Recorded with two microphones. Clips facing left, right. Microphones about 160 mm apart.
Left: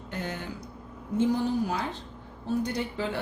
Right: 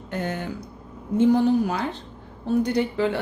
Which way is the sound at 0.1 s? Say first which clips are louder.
Right 6 dB; 55° right (ahead or behind).